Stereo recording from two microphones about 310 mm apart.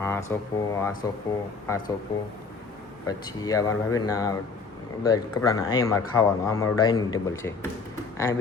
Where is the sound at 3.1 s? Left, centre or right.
Centre.